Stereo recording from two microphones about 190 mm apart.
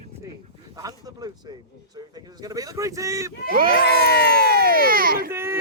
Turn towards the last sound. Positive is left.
turn(degrees=-15)  # may be behind; listen again after turning